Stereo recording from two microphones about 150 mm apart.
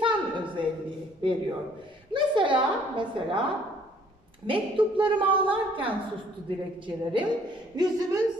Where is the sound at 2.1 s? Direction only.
30° right (ahead or behind).